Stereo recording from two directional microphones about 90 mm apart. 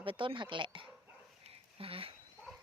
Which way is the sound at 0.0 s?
70° right (ahead or behind).